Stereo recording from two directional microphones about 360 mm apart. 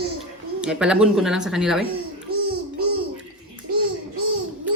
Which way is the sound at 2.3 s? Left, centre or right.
Right.